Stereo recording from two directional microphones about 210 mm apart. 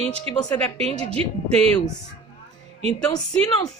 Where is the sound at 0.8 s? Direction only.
30° right (ahead or behind).